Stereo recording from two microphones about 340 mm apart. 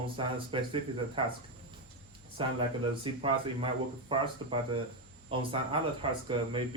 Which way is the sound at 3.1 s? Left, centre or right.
Centre.